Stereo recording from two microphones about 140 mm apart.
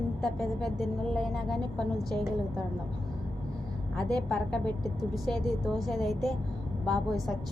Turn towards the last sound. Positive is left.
turn(degrees=5)  # may be behind; listen again after turning